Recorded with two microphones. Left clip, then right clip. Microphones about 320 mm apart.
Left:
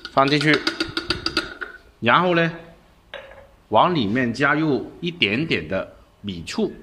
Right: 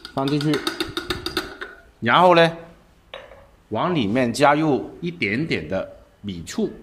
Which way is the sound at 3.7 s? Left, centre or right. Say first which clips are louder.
Left 5 dB; centre.